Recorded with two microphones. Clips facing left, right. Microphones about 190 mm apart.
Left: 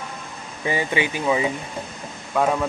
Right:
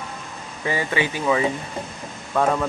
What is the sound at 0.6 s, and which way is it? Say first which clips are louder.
Speech: left 1 dB; 20° left (ahead or behind).